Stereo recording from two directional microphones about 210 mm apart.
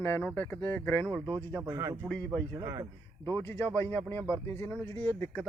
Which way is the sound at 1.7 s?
15° right (ahead or behind).